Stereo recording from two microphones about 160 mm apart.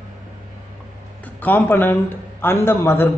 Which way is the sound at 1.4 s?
10° left (ahead or behind).